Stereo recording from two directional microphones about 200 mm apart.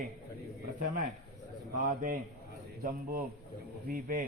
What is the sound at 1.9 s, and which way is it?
A man's voice, 45° right (ahead or behind).